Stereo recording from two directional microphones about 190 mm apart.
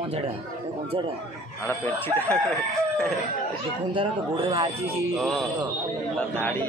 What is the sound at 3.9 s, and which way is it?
Speech, 25° right (ahead or behind).